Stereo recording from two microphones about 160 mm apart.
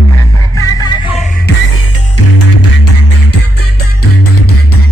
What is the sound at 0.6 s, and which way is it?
Music, 25° left (ahead or behind).